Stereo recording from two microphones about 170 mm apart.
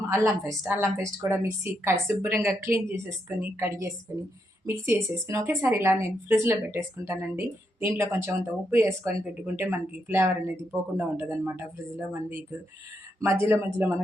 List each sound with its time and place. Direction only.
0.7 s a woman's voice: 15° right (ahead or behind)